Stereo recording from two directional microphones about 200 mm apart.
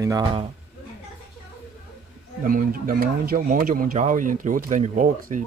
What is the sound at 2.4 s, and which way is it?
Speech, 45° right (ahead or behind).